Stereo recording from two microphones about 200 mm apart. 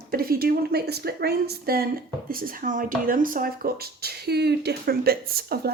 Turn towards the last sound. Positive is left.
turn(degrees=-50)  # may be behind; listen again after turning